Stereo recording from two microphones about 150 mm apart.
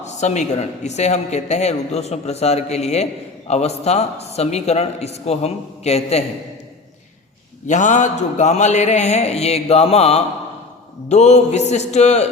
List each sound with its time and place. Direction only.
0.0 s speech: 50° left (ahead or behind)
7.7 s speech: 55° left (ahead or behind)